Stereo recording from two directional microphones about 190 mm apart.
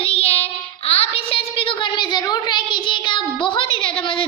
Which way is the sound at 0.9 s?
30° left (ahead or behind).